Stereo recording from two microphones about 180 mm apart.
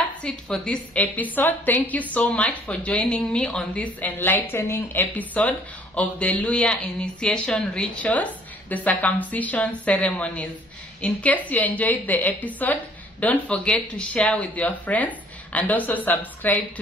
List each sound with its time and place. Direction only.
0.2 s a woman's voice: 5° left (ahead or behind)